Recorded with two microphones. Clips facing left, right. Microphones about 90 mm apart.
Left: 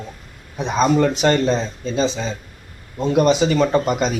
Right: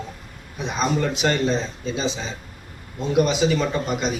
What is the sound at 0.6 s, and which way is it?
A man's voice, 40° left (ahead or behind).